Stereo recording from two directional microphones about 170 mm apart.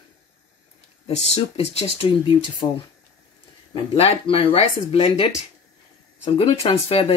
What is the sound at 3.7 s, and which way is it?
Speech, 30° left (ahead or behind).